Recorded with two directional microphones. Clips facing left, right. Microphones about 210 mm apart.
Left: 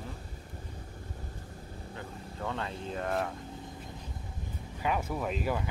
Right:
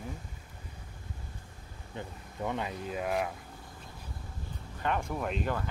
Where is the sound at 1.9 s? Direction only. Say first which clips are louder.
Right 3 dB; 15° right (ahead or behind).